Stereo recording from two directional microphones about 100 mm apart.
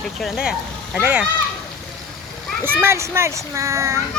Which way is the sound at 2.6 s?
25° right (ahead or behind).